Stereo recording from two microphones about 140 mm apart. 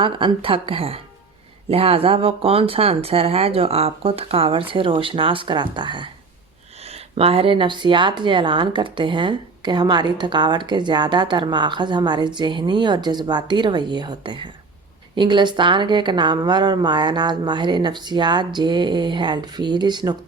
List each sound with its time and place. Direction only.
0.0 s speech: 40° right (ahead or behind)
6.8 s speech: 45° right (ahead or behind)